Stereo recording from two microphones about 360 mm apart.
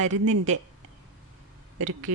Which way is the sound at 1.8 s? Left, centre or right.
Right.